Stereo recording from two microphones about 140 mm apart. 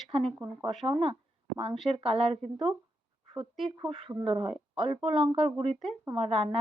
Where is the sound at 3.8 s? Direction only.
40° right (ahead or behind).